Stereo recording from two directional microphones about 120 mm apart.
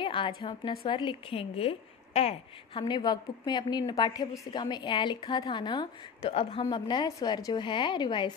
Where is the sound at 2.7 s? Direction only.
40° left (ahead or behind).